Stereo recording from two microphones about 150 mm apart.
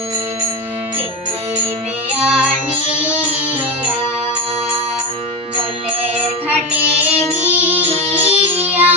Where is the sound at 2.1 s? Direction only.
5° right (ahead or behind).